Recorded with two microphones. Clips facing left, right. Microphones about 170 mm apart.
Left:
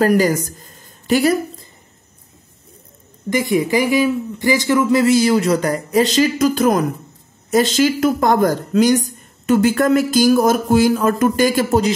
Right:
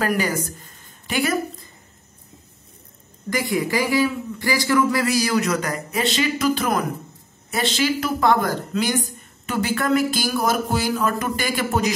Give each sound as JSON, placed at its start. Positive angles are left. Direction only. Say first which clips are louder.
{"t": 0.0, "sound": "a woman's voice", "louder": "left 8 dB", "side_deg": 40}
{"t": 3.3, "sound": "a man's voice", "louder": "left 6 dB", "side_deg": 20}